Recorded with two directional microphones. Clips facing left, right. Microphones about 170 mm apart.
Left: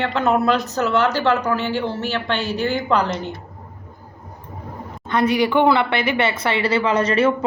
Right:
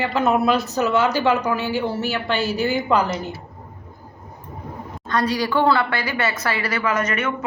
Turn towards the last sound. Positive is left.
turn(degrees=30)  # may be behind; listen again after turning